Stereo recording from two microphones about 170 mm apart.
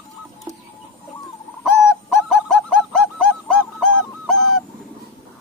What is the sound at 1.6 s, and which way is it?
Bird, centre (ahead or behind).